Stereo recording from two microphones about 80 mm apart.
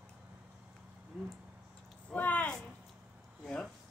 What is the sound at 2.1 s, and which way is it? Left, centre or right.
Speech, centre.